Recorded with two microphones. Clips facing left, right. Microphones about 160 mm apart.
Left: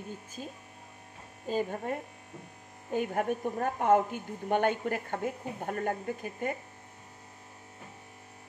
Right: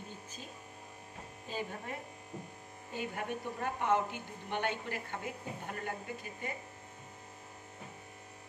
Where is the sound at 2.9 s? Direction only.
50° left (ahead or behind).